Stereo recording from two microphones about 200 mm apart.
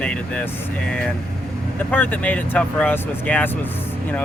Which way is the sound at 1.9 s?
10° left (ahead or behind).